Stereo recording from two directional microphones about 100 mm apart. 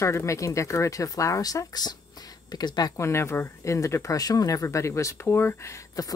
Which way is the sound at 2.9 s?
25° left (ahead or behind).